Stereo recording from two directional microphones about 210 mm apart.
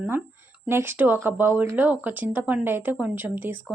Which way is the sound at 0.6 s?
10° right (ahead or behind).